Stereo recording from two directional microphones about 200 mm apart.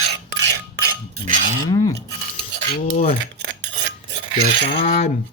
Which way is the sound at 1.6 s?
15° left (ahead or behind).